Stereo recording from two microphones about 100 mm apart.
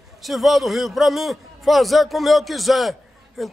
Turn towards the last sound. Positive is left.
turn(degrees=0)  # may be behind; listen again after turning